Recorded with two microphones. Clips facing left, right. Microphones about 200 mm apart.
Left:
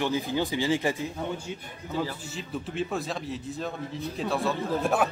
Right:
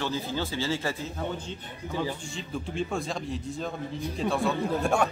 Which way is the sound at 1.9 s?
15° right (ahead or behind).